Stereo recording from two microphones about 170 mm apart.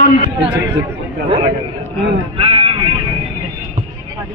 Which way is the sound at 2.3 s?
35° right (ahead or behind).